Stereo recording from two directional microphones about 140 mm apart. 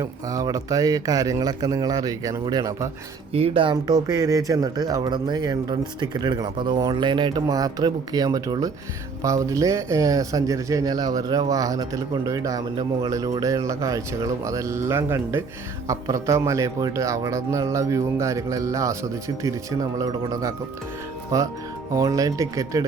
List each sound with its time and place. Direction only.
0.0 s speech: 25° right (ahead or behind)
3.3 s speech: 45° right (ahead or behind); by 22.8 s 25° right (ahead or behind)